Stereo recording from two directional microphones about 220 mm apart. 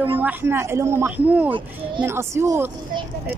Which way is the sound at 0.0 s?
10° right (ahead or behind).